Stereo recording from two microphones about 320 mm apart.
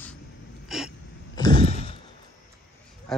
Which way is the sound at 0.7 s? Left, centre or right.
Centre.